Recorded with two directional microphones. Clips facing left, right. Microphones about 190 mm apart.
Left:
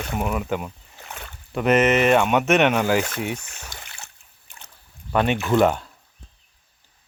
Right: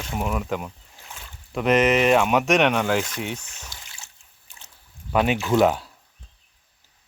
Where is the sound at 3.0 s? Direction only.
60° left (ahead or behind).